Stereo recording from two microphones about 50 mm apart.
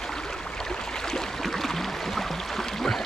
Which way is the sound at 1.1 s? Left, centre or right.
Centre.